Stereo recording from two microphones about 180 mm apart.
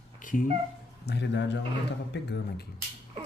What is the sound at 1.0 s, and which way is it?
Speech, 70° left (ahead or behind).